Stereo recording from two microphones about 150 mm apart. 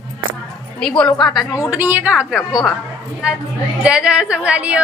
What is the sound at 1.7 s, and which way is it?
A woman's voice, 10° right (ahead or behind).